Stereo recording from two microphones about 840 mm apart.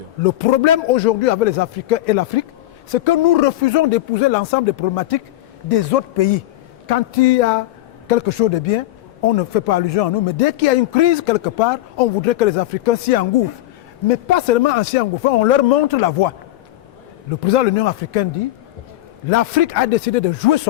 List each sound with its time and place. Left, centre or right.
0.3 s a man's voice: left
4.9 s a man's voice: left
8.0 s a man's voice: left
17.4 s speech: left
19.3 s a man's voice: left